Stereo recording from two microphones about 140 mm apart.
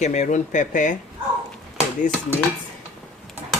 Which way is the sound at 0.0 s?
55° left (ahead or behind).